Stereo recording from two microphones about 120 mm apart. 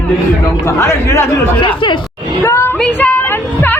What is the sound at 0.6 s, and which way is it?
Speech, 25° left (ahead or behind).